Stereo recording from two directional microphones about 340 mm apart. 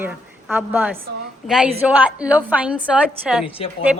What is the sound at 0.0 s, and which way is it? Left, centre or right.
A woman's voice, centre.